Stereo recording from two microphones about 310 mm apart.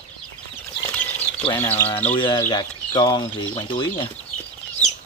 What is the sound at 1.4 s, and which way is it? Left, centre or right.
Speech, centre.